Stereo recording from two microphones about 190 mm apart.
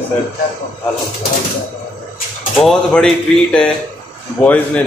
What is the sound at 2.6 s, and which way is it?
A man's voice, centre (ahead or behind).